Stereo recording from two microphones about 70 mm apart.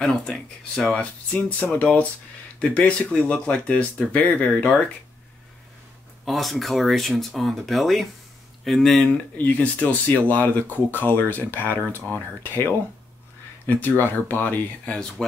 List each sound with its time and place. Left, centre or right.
0.0 s speech: centre
6.2 s speech: centre
9.4 s speech: centre
13.7 s speech: left
14.9 s speech: centre